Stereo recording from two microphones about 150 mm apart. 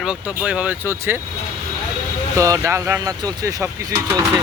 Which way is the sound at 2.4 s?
20° right (ahead or behind).